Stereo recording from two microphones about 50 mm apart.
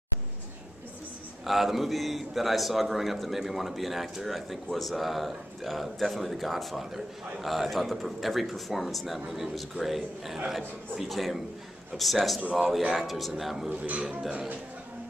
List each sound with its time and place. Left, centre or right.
1.4 s a man's voice: centre
13.7 s a man's voice: right